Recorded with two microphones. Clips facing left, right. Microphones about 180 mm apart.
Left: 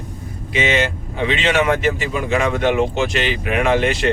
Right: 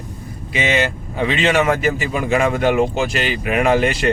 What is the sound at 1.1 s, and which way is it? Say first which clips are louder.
Speech: right 1 dB; 45° right (ahead or behind).